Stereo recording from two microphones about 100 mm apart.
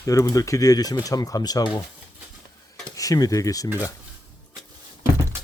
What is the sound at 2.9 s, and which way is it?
Speech, 35° left (ahead or behind).